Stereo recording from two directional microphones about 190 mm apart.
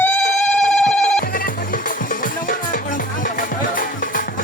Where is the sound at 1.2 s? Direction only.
50° left (ahead or behind).